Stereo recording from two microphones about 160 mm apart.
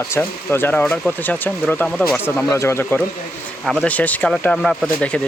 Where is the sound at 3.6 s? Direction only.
Centre (ahead or behind).